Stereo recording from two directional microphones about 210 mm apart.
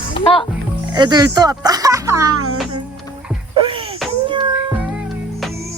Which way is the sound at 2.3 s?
90° right.